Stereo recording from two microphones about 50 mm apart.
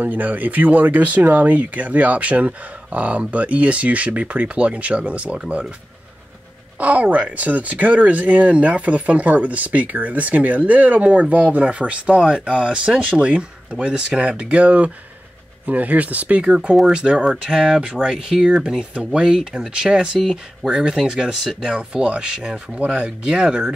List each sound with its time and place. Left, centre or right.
0.0 s speech: right
6.8 s speech: right; by 23.7 s centre